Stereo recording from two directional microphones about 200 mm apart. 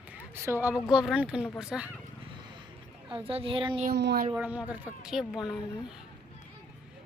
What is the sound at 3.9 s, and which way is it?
Speech, 55° right (ahead or behind).